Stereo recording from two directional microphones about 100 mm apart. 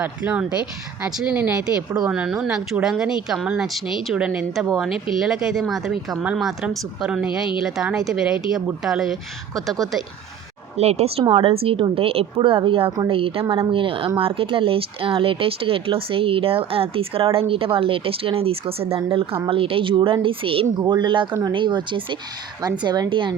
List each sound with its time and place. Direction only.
0.0 s speech: 15° right (ahead or behind)
10.8 s speech: 90° right
11.3 s a woman's voice: 70° right (ahead or behind)
20.7 s speech: 50° right (ahead or behind)